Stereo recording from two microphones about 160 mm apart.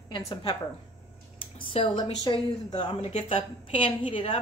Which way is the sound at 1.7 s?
30° left (ahead or behind).